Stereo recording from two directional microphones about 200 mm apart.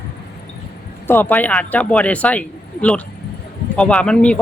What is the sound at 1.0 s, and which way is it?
Speech, 10° left (ahead or behind).